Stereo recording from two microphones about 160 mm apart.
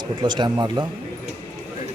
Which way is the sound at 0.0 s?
30° right (ahead or behind).